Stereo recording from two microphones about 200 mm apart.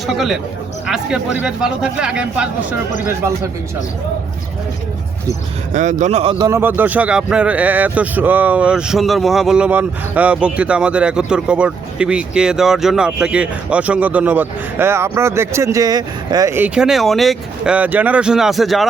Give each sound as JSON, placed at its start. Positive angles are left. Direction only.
{"t": 0.9, "sound": "speech", "side_deg": -5}
{"t": 5.7, "sound": "a man's voice", "side_deg": -40}
{"t": 6.4, "sound": "speech", "side_deg": -10}